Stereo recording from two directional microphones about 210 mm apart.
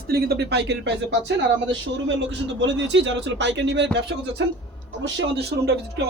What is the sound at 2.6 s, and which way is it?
Speech, 60° right (ahead or behind).